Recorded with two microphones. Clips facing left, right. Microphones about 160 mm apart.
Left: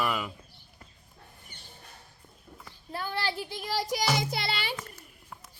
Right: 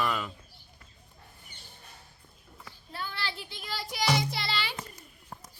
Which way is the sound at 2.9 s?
45° left (ahead or behind).